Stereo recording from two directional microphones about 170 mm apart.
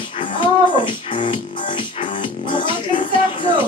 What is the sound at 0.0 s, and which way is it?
Music, 30° left (ahead or behind).